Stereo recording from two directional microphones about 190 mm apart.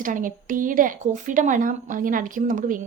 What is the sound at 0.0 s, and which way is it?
A woman's voice, 45° right (ahead or behind).